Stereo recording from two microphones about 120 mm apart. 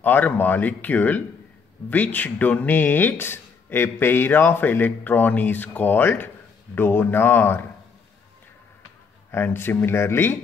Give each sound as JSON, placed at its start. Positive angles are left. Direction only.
{"t": 0.0, "sound": "speech", "side_deg": 15}
{"t": 9.3, "sound": "speech", "side_deg": 20}